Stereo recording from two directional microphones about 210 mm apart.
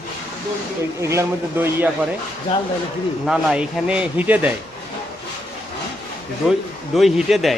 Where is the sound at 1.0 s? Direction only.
15° right (ahead or behind).